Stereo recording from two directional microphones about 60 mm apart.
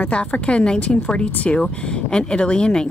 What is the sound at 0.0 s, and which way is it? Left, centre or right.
Speech, centre.